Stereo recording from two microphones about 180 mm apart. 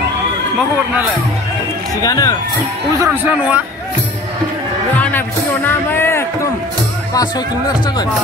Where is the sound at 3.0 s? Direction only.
10° right (ahead or behind).